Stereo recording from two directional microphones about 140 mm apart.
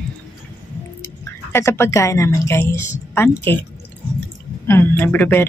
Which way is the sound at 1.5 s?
20° left (ahead or behind).